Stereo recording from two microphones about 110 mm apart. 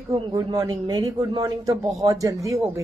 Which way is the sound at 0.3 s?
35° right (ahead or behind).